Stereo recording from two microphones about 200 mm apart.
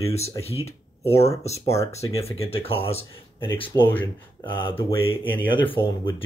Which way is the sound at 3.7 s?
15° left (ahead or behind).